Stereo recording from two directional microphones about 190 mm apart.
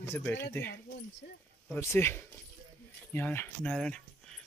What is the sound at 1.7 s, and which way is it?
Speech, 15° left (ahead or behind).